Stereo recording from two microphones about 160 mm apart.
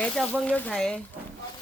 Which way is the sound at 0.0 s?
5° left (ahead or behind).